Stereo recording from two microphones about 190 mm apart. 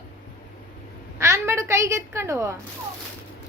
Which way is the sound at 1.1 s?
15° right (ahead or behind).